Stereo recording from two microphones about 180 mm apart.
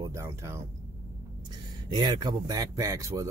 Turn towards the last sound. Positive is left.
turn(degrees=-20)  # may be behind; listen again after turning